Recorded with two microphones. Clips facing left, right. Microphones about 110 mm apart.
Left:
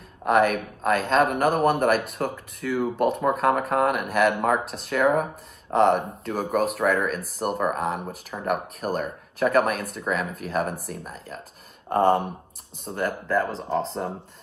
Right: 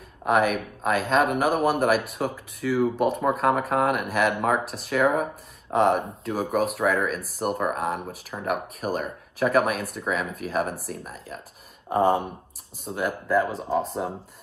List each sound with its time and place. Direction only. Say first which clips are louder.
0.2 s speech: left 2 dB; 5° right (ahead or behind)